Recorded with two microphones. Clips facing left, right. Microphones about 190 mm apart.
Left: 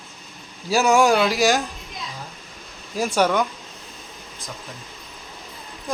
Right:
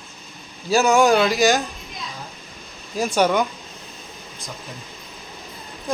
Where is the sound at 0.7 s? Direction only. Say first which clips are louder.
Right 1 dB; 10° left (ahead or behind).